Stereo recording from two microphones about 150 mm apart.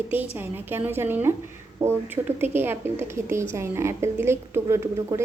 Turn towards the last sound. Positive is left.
turn(degrees=-20)  # may be behind; listen again after turning